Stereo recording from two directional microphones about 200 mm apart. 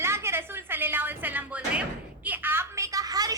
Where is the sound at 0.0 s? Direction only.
10° right (ahead or behind).